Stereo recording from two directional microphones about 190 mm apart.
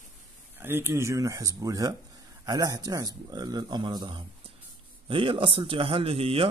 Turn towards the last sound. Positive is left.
turn(degrees=-30)  # may be behind; listen again after turning